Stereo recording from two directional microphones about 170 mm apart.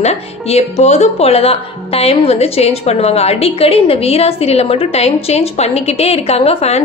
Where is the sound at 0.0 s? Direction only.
40° left (ahead or behind).